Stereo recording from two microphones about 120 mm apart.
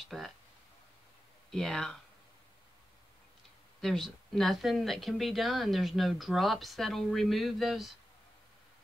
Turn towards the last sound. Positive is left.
turn(degrees=0)  # may be behind; listen again after turning